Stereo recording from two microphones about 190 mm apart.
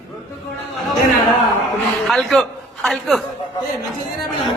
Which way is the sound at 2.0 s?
Centre (ahead or behind).